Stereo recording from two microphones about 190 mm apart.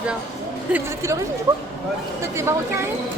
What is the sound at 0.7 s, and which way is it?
Speech, 15° right (ahead or behind).